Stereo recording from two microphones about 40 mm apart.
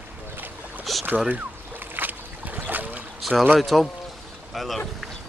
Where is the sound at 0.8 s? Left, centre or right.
Centre.